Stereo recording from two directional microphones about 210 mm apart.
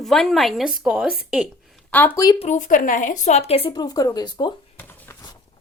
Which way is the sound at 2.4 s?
35° left (ahead or behind).